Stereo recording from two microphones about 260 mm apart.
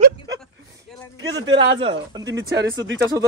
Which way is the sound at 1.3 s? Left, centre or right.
Centre.